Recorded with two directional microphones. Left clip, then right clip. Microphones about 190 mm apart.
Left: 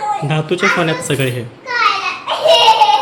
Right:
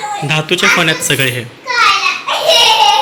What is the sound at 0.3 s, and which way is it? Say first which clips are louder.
Speech: right 7 dB; 10° left (ahead or behind).